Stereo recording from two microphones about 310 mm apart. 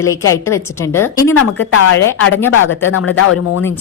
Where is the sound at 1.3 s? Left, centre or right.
Left.